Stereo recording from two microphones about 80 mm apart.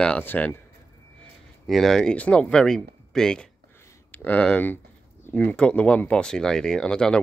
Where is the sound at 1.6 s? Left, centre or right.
Centre.